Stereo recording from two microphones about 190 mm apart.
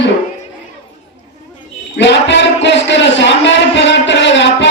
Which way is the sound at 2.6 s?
70° left (ahead or behind).